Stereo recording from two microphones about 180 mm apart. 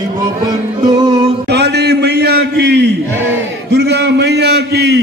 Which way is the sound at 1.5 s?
65° right (ahead or behind).